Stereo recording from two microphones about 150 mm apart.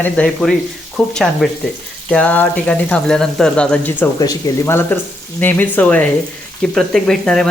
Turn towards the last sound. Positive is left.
turn(degrees=5)  # may be behind; listen again after turning